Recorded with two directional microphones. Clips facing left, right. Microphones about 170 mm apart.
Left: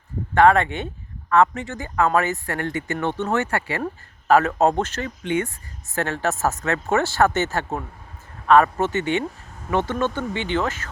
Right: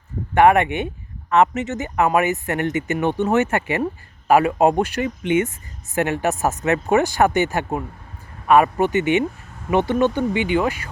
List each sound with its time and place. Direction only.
0.3 s speech: 15° right (ahead or behind)